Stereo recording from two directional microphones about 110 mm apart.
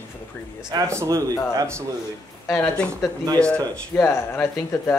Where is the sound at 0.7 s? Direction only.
30° right (ahead or behind).